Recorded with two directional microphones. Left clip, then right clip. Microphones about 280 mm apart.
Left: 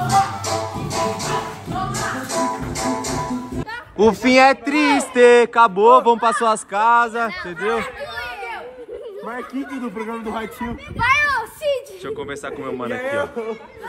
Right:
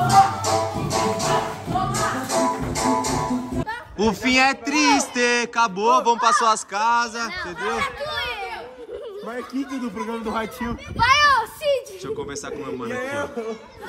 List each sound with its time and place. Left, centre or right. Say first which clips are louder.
0.0 s music: right 2 dB; centre
4.0 s a man's voice: left 6 dB; centre
7.8 s a child's voice: right 3 dB; centre
9.9 s a man's voice: right 1 dB; centre
11.3 s a sound: right 1 dB; centre
12.2 s a man's voice: left 2 dB; centre
12.9 s speech: left 4 dB; centre